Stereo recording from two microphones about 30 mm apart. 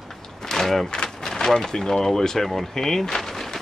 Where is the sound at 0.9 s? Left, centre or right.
Left.